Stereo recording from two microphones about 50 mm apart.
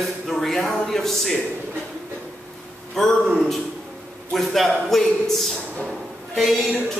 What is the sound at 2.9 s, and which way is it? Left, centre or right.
A man's voice, centre.